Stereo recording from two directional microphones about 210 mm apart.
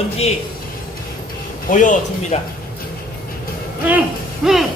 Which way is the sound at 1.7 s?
35° left (ahead or behind).